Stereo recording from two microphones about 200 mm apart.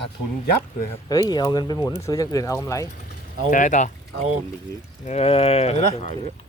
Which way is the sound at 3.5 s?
40° left (ahead or behind).